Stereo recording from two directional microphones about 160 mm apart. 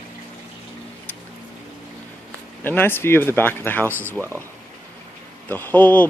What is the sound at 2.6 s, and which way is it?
Speech, 15° left (ahead or behind).